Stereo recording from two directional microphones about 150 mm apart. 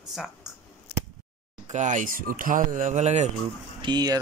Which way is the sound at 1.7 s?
55° right (ahead or behind).